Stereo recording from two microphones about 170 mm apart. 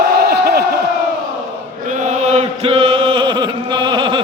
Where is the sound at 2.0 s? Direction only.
40° right (ahead or behind).